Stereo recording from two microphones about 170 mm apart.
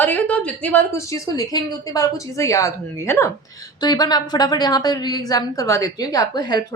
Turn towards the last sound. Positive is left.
turn(degrees=25)  # may be behind; listen again after turning